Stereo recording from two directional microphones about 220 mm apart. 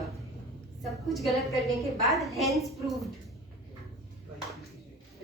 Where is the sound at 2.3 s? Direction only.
Centre (ahead or behind).